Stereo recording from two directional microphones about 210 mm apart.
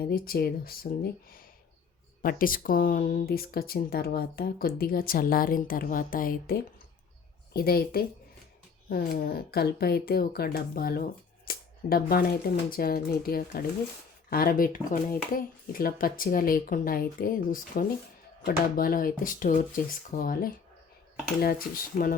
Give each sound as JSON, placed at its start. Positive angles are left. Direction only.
{"t": 0.0, "sound": "speech", "side_deg": 45}